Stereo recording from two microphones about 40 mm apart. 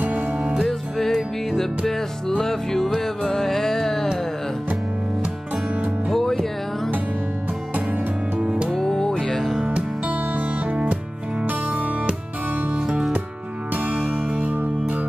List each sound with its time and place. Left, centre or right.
0.0 s music: right
0.7 s music: centre
6.1 s music: centre
8.7 s music: centre
9.8 s music: right
14.4 s music: right